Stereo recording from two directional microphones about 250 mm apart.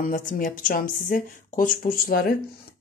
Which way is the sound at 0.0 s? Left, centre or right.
Left.